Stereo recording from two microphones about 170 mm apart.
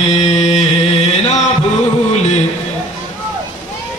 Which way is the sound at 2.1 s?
40° left (ahead or behind).